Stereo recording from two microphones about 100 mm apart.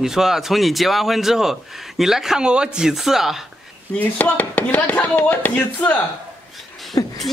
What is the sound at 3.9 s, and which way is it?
Speech, 15° left (ahead or behind).